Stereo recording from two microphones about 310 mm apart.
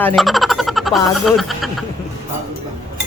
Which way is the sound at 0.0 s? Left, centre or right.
Centre.